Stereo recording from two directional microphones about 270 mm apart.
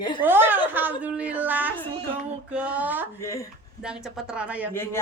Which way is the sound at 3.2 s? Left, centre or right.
Centre.